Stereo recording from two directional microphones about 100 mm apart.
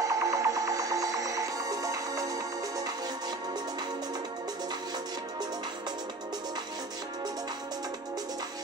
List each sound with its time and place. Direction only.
0.0 s music: 35° right (ahead or behind)